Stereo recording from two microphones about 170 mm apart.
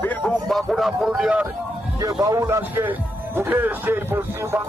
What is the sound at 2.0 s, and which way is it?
A man's voice, 20° right (ahead or behind).